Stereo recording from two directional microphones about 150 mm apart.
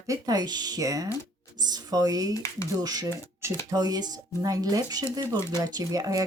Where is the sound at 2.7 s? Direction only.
25° right (ahead or behind).